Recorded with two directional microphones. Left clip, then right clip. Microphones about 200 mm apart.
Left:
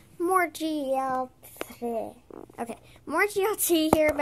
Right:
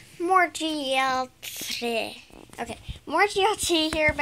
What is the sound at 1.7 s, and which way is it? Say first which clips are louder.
Speech: right 4 dB; 15° right (ahead or behind).